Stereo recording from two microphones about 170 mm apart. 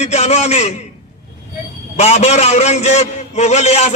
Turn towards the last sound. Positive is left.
turn(degrees=40)  # may be behind; listen again after turning